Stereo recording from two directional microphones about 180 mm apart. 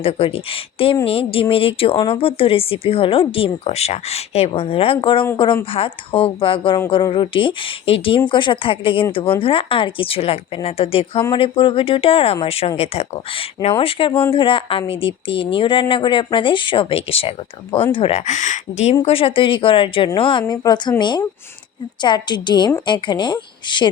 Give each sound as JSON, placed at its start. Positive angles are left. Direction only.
{"t": 0.0, "sound": "speech", "side_deg": 30}
{"t": 14.1, "sound": "speech", "side_deg": 10}
{"t": 14.3, "sound": "speech", "side_deg": 30}
{"t": 19.0, "sound": "speech", "side_deg": 30}
{"t": 22.0, "sound": "speech", "side_deg": 25}